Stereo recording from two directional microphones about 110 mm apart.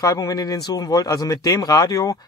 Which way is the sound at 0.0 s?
35° left (ahead or behind).